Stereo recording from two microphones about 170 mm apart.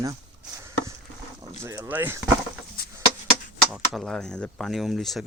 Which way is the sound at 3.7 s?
Centre (ahead or behind).